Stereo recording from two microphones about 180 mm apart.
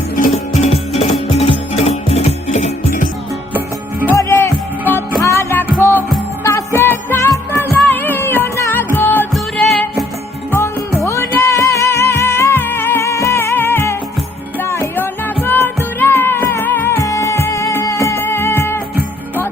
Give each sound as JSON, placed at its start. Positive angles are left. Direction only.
{"t": 0.2, "sound": "music", "side_deg": 35}
{"t": 4.1, "sound": "music", "side_deg": 15}
{"t": 10.5, "sound": "music", "side_deg": 15}